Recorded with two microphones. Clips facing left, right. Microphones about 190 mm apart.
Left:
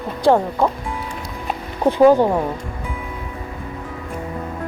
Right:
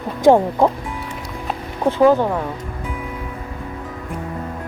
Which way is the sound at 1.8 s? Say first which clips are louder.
Left 2 dB; 15° left (ahead or behind).